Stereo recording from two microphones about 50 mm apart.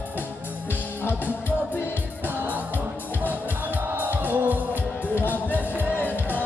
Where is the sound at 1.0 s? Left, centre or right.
Left.